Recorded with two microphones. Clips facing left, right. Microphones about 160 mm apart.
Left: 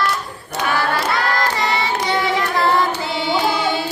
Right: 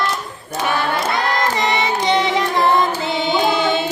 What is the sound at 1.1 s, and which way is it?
Child singing, 20° right (ahead or behind).